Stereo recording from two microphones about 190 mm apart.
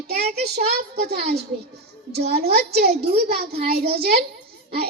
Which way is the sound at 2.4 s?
55° right (ahead or behind).